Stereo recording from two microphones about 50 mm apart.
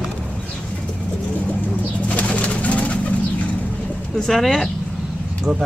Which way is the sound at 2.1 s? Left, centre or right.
Left.